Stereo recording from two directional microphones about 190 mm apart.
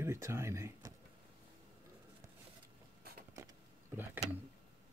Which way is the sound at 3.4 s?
15° right (ahead or behind).